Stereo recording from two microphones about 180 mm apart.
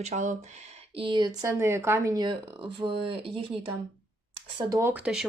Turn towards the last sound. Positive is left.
turn(degrees=-5)  # may be behind; listen again after turning